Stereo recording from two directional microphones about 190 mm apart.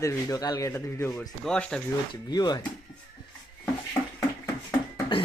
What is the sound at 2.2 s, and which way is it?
Speech, 20° left (ahead or behind).